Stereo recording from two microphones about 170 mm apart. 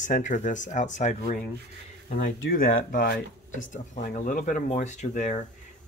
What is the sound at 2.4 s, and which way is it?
Speech, 60° left (ahead or behind).